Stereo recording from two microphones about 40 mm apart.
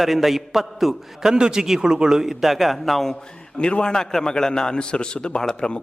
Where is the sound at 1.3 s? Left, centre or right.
Centre.